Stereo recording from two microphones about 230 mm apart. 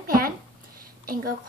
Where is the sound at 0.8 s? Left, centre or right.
Right.